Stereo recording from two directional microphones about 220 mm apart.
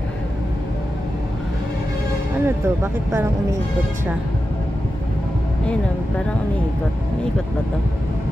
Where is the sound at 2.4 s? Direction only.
10° right (ahead or behind).